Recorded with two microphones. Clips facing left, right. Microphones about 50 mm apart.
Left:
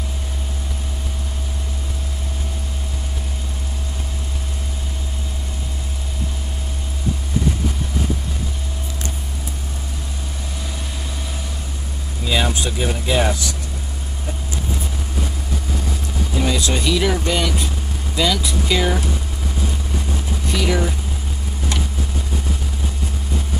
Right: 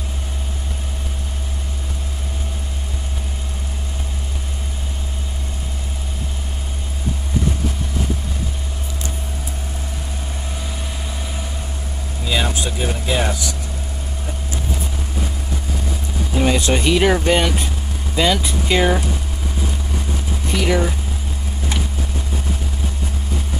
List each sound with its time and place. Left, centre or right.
12.3 s speech: centre
16.4 s speech: right
20.5 s speech: centre